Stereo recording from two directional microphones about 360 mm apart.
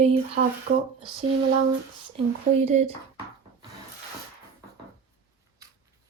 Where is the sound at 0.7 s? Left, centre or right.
Right.